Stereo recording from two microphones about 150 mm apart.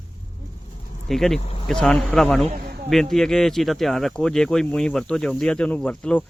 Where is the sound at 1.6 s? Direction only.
5° left (ahead or behind).